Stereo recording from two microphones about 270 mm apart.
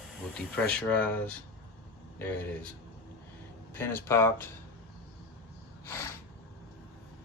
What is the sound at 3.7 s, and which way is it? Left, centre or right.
Speech, centre.